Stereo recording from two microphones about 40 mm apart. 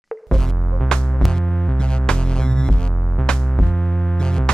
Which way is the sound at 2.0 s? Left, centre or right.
Left.